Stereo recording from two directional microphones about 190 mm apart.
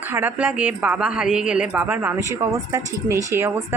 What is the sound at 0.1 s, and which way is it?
Speech, 10° right (ahead or behind).